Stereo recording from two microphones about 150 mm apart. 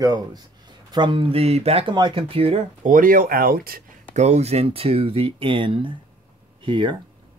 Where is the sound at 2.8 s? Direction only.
65° right (ahead or behind).